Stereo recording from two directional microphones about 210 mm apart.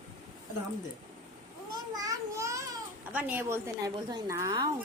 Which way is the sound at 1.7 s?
15° right (ahead or behind).